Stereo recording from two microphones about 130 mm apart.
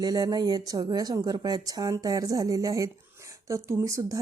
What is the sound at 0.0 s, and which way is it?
Speech, 30° right (ahead or behind).